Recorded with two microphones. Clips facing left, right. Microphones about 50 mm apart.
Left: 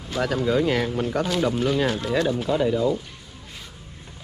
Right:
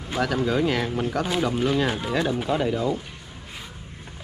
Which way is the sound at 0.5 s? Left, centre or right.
Right.